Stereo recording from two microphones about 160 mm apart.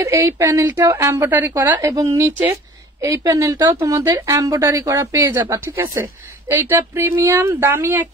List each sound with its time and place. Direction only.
0.0 s a woman's voice: 15° right (ahead or behind)